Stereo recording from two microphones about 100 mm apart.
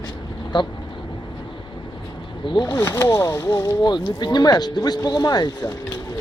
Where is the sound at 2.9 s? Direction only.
30° left (ahead or behind).